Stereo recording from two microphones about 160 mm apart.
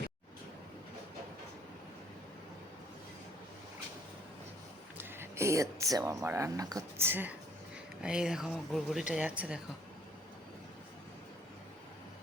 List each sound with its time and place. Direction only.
4.9 s speech: 15° right (ahead or behind)